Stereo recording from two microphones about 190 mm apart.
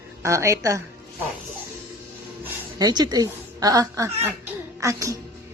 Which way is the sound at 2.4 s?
20° right (ahead or behind).